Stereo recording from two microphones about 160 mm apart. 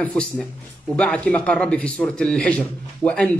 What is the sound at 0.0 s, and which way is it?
A man's voice, 10° left (ahead or behind).